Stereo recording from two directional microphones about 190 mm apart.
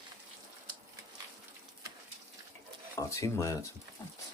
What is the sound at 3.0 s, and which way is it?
Speech, 15° left (ahead or behind).